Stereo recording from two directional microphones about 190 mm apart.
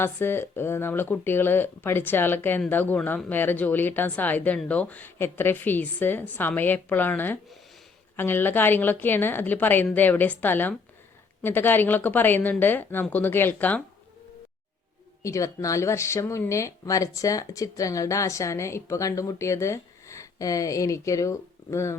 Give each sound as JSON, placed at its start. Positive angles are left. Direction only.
{"t": 0.0, "sound": "speech", "side_deg": 10}
{"t": 15.2, "sound": "speech", "side_deg": 15}